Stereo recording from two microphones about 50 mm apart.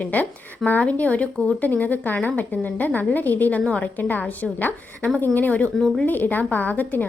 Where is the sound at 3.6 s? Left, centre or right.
Left.